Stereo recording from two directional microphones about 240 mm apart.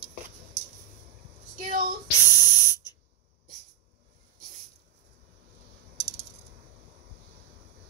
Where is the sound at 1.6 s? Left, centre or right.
Right.